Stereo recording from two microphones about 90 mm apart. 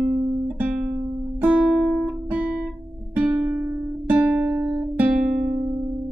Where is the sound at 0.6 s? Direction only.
10° right (ahead or behind).